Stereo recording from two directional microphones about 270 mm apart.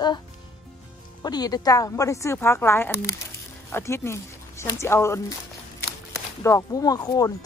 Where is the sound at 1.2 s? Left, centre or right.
Centre.